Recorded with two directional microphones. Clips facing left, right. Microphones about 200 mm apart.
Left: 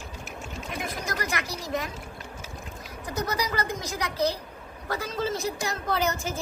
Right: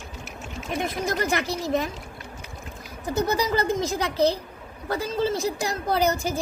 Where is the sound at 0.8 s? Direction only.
25° right (ahead or behind).